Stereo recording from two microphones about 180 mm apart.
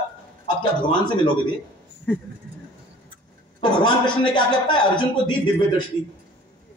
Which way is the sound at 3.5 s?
25° left (ahead or behind).